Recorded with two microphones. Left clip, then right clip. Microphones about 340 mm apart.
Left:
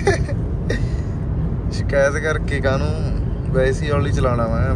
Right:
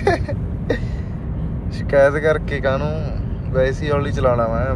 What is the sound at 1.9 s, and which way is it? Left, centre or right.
Speech, centre.